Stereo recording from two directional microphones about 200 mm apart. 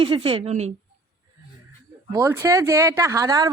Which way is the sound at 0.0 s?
25° right (ahead or behind).